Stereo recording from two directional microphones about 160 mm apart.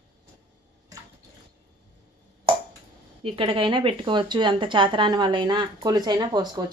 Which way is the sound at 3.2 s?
35° right (ahead or behind).